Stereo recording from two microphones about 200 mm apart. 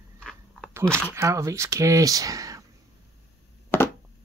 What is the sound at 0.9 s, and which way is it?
Speech, 15° right (ahead or behind).